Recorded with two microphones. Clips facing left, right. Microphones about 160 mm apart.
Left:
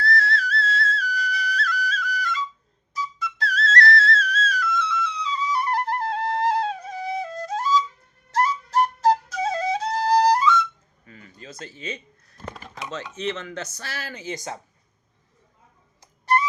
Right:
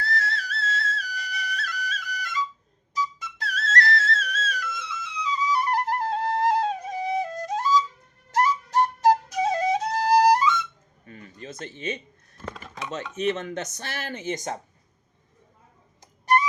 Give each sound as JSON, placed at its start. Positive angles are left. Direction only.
{"t": 0.0, "sound": "music", "side_deg": -20}
{"t": 0.5, "sound": "flute", "side_deg": -20}
{"t": 3.3, "sound": "music", "side_deg": -20}
{"t": 4.7, "sound": "music", "side_deg": -45}
{"t": 5.2, "sound": "flute", "side_deg": -15}
{"t": 5.9, "sound": "flute", "side_deg": -45}
{"t": 6.7, "sound": "flute", "side_deg": -15}
{"t": 9.9, "sound": "flute", "side_deg": -45}
{"t": 10.2, "sound": "flute", "side_deg": -20}
{"t": 11.4, "sound": "speech", "side_deg": -20}
{"t": 13.1, "sound": "speech", "side_deg": -20}
{"t": 16.0, "sound": "a sound", "side_deg": -15}